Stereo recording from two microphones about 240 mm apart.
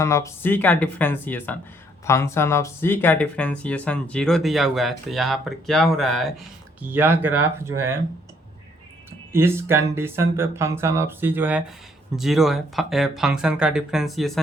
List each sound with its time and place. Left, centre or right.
0.0 s speech: centre
9.3 s speech: centre